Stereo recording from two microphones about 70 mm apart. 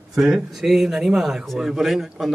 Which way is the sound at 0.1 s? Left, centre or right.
Centre.